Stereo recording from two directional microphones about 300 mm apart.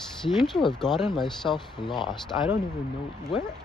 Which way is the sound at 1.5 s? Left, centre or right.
Centre.